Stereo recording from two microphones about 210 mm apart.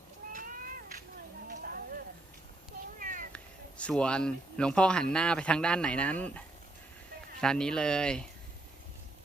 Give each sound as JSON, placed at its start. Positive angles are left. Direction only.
{"t": 0.2, "sound": "cat", "side_deg": -45}
{"t": 1.5, "sound": "a sound", "side_deg": -45}
{"t": 3.0, "sound": "cat", "side_deg": -40}
{"t": 3.3, "sound": "speech", "side_deg": 5}
{"t": 7.4, "sound": "speech", "side_deg": 5}